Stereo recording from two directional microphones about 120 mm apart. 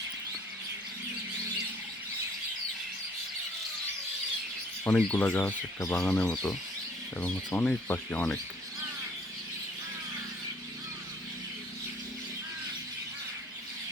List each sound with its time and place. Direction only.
4.9 s speech: 15° left (ahead or behind)